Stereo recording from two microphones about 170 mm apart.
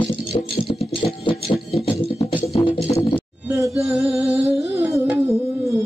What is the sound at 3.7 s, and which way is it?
Music, 5° right (ahead or behind).